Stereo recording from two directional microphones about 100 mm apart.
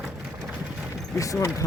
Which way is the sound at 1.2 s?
35° left (ahead or behind).